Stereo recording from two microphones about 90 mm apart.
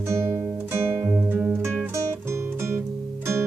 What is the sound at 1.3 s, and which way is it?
Music, 20° right (ahead or behind).